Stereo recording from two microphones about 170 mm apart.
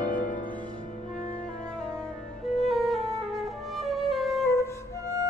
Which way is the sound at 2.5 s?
Centre (ahead or behind).